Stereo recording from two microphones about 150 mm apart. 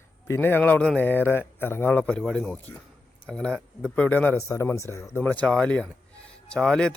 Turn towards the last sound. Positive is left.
turn(degrees=5)  # may be behind; listen again after turning